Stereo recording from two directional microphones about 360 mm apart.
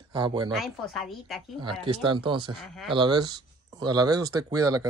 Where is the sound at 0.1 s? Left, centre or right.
Centre.